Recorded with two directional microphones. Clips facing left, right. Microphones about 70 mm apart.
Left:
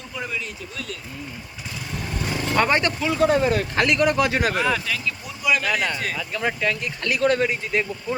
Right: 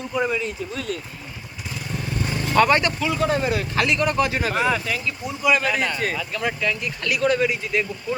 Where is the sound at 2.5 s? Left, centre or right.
Left.